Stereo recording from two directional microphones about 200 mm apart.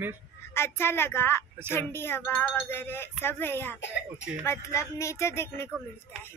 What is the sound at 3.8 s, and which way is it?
Speech, 60° left (ahead or behind).